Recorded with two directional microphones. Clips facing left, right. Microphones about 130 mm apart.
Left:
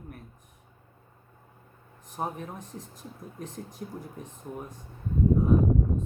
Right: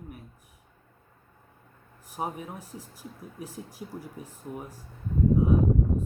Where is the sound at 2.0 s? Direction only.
10° right (ahead or behind).